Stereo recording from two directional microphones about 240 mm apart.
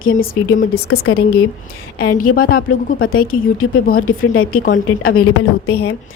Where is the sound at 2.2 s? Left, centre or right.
Left.